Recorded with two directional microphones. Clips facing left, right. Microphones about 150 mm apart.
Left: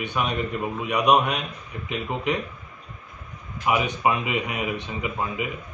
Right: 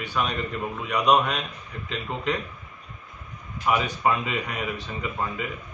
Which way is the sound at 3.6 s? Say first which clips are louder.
Left 1 dB; 15° left (ahead or behind).